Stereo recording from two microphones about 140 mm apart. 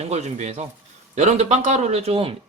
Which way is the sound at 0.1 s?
55° right (ahead or behind).